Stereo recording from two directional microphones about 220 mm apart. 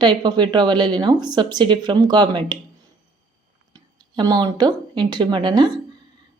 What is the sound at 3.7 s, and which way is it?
A woman's voice, 20° right (ahead or behind).